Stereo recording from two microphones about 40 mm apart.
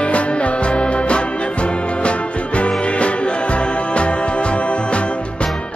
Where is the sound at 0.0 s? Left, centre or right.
Left.